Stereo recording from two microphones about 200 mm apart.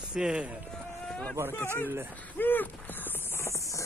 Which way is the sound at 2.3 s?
10° left (ahead or behind).